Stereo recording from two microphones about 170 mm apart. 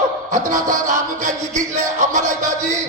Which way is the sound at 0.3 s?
50° right (ahead or behind).